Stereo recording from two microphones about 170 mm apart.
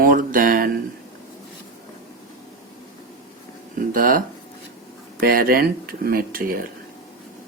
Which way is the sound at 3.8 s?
55° right (ahead or behind).